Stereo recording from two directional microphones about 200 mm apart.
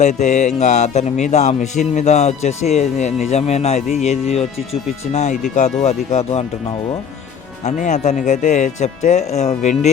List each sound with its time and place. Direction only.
0.0 s speech: 35° left (ahead or behind)
7.6 s speech: 35° left (ahead or behind)